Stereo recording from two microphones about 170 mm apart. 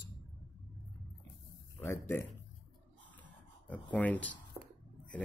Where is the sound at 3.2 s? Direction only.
10° left (ahead or behind).